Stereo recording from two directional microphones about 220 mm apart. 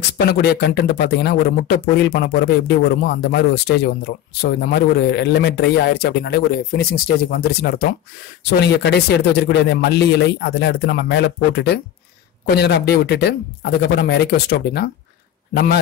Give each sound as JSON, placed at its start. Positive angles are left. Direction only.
{"t": 0.3, "sound": "a man's voice", "side_deg": 50}